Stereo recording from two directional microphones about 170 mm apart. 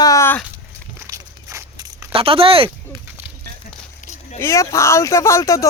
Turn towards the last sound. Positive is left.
turn(degrees=20)  # may be behind; listen again after turning